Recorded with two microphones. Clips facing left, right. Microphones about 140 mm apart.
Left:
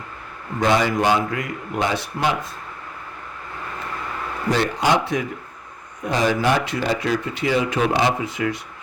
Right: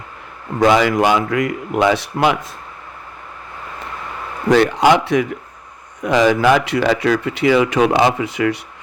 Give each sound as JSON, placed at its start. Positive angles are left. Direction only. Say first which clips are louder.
{"t": 0.8, "sound": "speech", "louder": "right 4 dB", "side_deg": -80}
{"t": 4.4, "sound": "speech", "louder": "right 8 dB", "side_deg": -90}